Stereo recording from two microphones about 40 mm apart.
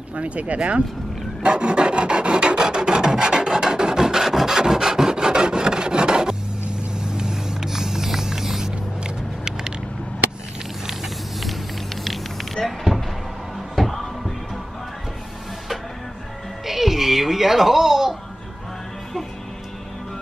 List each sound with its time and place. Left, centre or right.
0.1 s speech: right
1.4 s filing: right
7.0 s vehicle: centre
10.9 s vehicle: centre
12.6 s a sound: centre
13.7 s music: centre
16.6 s music: centre